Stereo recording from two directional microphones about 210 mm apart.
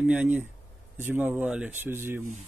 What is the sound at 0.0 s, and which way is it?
Speech, 5° right (ahead or behind).